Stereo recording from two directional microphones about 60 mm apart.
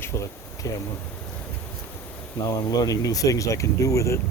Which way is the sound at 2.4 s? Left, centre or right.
Left.